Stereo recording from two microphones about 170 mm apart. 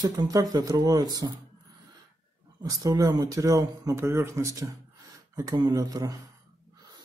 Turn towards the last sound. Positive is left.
turn(degrees=-20)  # may be behind; listen again after turning